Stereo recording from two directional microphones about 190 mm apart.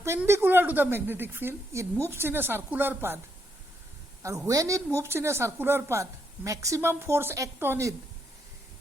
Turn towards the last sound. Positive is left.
turn(degrees=-10)  # may be behind; listen again after turning